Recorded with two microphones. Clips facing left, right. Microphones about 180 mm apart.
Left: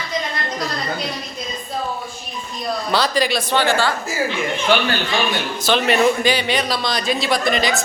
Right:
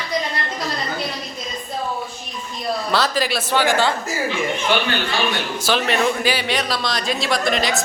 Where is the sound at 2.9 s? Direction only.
Centre (ahead or behind); by 3.9 s 15° right (ahead or behind).